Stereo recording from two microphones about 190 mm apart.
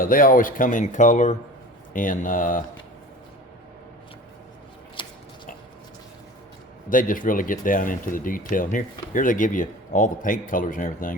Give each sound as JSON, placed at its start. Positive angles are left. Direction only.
{"t": 0.0, "sound": "speech", "side_deg": 45}
{"t": 5.0, "sound": "a sound", "side_deg": 25}
{"t": 6.9, "sound": "speech", "side_deg": 45}